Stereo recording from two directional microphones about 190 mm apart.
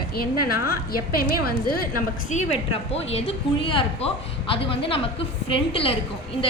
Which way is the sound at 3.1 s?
30° left (ahead or behind).